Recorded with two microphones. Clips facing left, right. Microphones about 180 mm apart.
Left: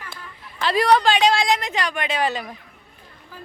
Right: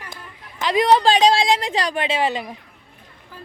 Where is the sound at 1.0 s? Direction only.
35° right (ahead or behind).